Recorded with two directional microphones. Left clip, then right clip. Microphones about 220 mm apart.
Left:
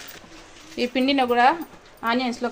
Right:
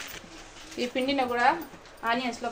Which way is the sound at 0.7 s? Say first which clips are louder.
Left 6 dB; 40° left (ahead or behind).